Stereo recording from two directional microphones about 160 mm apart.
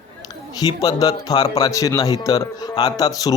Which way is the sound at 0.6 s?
25° left (ahead or behind).